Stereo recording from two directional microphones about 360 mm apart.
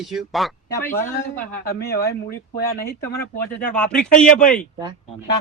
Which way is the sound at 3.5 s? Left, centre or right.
Centre.